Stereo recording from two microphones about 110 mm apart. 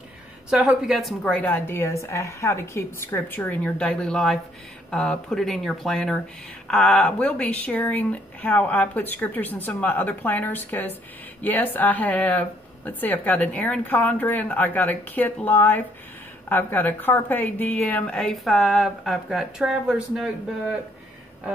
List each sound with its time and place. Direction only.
0.5 s speech: 5° right (ahead or behind)
1.2 s a woman's voice: 15° left (ahead or behind)
3.7 s speech: 5° left (ahead or behind)